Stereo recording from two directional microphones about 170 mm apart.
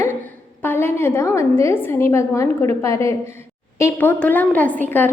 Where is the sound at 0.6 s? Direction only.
10° left (ahead or behind).